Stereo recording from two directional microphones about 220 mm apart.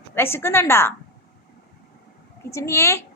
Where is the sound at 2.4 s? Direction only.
15° left (ahead or behind).